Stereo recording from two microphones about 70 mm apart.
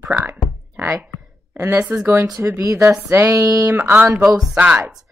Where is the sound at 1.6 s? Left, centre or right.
Right.